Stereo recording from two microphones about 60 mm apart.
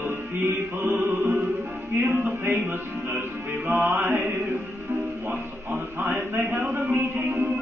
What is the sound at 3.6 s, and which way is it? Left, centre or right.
Speech, right.